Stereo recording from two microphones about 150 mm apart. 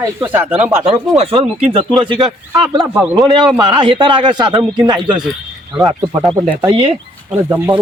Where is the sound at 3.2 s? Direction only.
30° right (ahead or behind).